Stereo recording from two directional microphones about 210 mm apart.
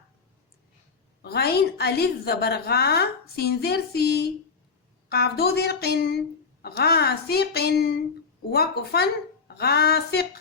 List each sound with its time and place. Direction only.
1.2 s a woman's voice: 50° left (ahead or behind)